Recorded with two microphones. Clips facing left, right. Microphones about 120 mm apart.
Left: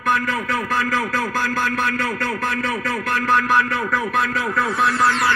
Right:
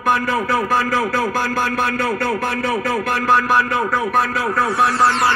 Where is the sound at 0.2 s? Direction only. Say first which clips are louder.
Right 4 dB; 30° right (ahead or behind).